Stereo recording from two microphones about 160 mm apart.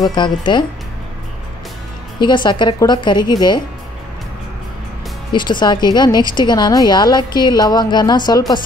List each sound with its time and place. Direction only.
0.1 s a woman's voice: 30° left (ahead or behind)
2.1 s a woman's voice: 30° left (ahead or behind)
5.3 s a woman's voice: 30° left (ahead or behind)